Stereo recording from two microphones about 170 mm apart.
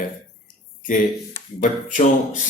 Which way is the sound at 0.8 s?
50° left (ahead or behind).